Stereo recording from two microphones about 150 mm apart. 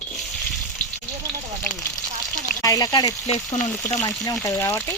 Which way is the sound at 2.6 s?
25° left (ahead or behind).